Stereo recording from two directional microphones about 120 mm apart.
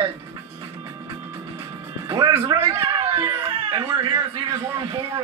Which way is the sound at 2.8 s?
40° right (ahead or behind).